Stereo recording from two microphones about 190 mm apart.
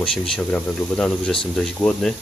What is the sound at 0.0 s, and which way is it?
Speech, 5° left (ahead or behind).